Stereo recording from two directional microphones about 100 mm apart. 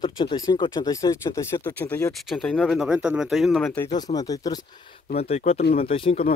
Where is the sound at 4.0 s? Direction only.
40° left (ahead or behind).